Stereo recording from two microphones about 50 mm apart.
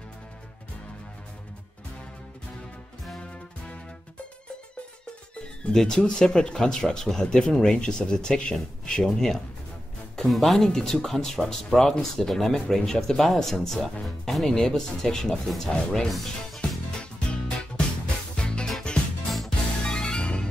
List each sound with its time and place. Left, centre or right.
5.6 s speech: centre
18.0 s music: left
19.2 s music: centre
19.8 s music: centre